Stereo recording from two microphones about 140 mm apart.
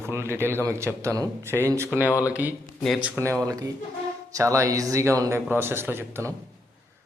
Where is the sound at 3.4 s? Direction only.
25° right (ahead or behind).